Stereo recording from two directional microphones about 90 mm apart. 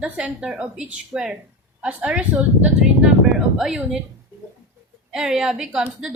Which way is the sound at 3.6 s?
5° right (ahead or behind).